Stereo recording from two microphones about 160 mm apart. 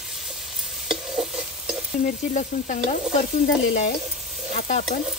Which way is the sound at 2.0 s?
50° left (ahead or behind).